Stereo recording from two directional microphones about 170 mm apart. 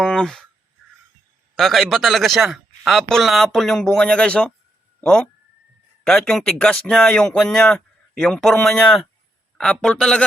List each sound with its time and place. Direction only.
0.0 s speech: 5° left (ahead or behind)
1.5 s speech: centre (ahead or behind)